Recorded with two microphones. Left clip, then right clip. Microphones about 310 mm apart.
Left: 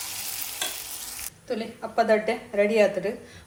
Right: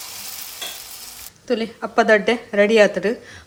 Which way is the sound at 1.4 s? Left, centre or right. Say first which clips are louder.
Right 9 dB; right.